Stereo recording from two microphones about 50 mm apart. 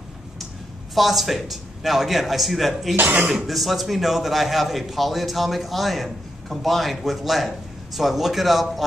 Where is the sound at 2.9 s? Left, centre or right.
Right.